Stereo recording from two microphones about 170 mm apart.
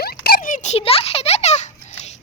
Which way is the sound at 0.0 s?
65° left (ahead or behind).